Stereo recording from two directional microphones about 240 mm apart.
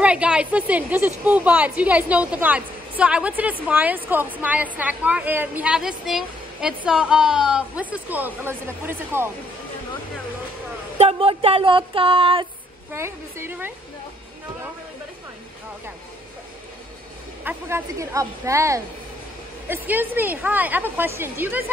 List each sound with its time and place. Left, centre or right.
0.0 s a woman's voice: centre
11.0 s speech: right
12.9 s a woman's voice: centre
17.5 s a woman's voice: centre